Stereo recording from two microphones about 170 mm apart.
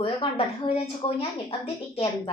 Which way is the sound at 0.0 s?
35° left (ahead or behind).